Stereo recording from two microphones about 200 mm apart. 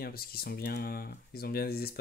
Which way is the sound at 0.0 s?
50° left (ahead or behind).